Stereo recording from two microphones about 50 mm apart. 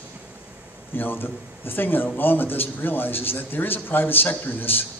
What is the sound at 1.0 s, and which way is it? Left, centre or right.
A man's voice, left.